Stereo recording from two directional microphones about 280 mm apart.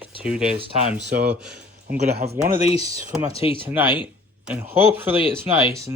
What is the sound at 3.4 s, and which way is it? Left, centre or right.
Speech, centre.